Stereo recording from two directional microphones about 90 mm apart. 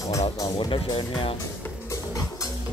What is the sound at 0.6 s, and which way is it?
Speech, 65° left (ahead or behind).